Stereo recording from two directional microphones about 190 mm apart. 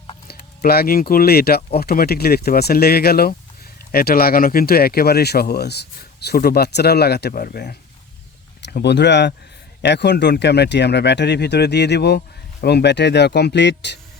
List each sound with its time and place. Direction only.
0.3 s speech: 55° left (ahead or behind)